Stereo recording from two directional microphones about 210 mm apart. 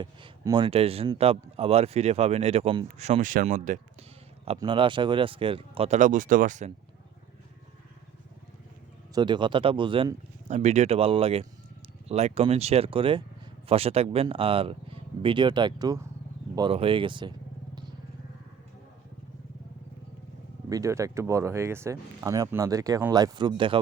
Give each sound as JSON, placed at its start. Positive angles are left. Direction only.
{"t": 0.0, "sound": "speech", "side_deg": -20}
{"t": 4.5, "sound": "speech", "side_deg": -20}
{"t": 9.1, "sound": "speech", "side_deg": -20}
{"t": 20.7, "sound": "speech", "side_deg": -15}